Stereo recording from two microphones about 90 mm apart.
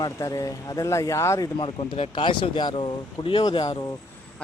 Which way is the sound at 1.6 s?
85° left.